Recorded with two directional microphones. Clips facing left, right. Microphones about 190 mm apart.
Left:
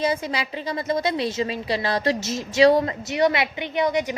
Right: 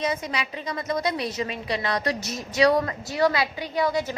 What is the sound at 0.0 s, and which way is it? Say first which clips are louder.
A woman's voice: left 3 dB; 30° left (ahead or behind).